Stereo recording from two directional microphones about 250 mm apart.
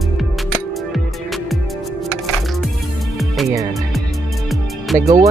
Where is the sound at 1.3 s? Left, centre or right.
Centre.